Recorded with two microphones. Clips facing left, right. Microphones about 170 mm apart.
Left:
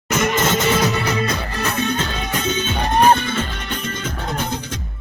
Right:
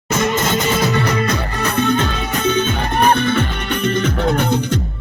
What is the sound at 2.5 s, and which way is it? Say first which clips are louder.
Music: right 4 dB; 55° right (ahead or behind).